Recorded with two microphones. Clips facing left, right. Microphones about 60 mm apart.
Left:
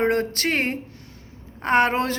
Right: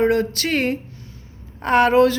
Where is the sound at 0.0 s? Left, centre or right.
Left.